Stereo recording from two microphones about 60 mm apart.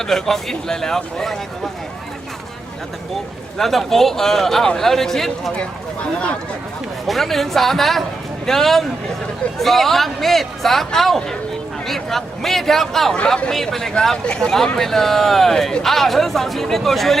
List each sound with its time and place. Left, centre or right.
0.0 s a man's voice: centre
3.6 s a man's voice: centre
6.0 s speech: centre
7.1 s a man's voice: centre